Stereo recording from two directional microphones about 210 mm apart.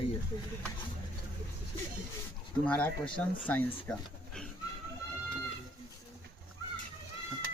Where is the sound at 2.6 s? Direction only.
5° left (ahead or behind).